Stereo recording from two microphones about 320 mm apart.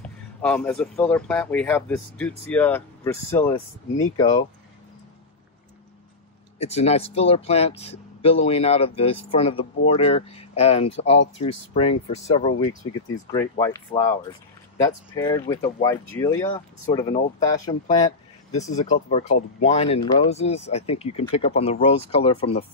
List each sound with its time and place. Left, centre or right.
0.4 s speech: centre
6.6 s speech: centre